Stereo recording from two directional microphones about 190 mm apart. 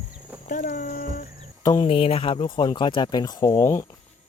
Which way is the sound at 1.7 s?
30° left (ahead or behind).